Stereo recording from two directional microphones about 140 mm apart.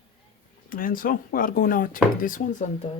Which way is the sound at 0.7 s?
90° left.